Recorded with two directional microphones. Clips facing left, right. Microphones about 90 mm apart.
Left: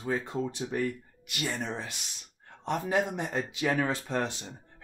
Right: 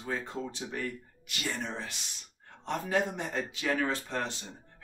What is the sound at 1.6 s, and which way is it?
Speech, 15° left (ahead or behind).